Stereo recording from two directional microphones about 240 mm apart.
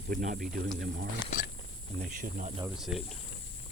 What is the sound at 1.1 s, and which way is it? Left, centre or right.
Speech, left.